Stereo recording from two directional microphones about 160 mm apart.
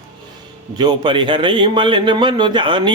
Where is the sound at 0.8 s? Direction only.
30° right (ahead or behind).